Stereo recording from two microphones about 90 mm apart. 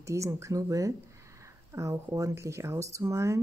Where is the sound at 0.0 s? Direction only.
35° right (ahead or behind).